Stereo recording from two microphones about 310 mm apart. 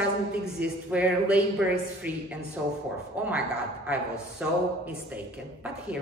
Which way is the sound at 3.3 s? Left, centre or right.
Centre.